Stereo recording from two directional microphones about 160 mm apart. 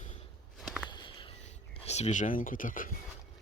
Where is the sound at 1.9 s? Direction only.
45° left (ahead or behind).